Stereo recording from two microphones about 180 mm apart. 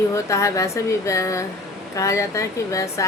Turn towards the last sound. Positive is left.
turn(degrees=15)  # may be behind; listen again after turning